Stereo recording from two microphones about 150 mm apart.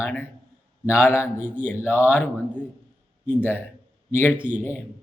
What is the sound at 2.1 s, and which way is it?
Speech, 15° left (ahead or behind).